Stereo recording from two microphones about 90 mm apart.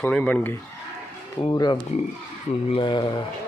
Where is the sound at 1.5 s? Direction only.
50° left (ahead or behind).